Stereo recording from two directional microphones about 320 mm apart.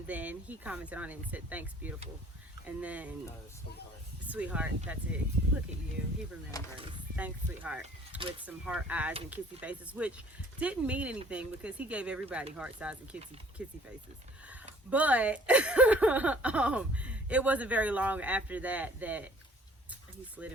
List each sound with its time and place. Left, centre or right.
0.1 s speech: centre
4.3 s speech: centre
5.4 s speech: right
6.5 s speech: centre
7.2 s speech: centre
19.9 s a sound: centre